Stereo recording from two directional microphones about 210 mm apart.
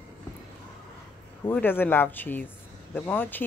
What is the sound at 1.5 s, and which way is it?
Speech, 10° left (ahead or behind).